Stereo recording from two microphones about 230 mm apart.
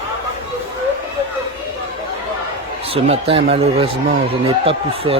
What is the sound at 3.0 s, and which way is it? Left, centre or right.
A man's voice, right.